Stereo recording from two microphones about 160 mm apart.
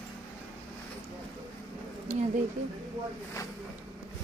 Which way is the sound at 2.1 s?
45° right (ahead or behind).